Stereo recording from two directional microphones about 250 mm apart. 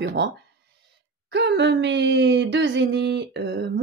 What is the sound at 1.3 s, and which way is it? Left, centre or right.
Speech, right.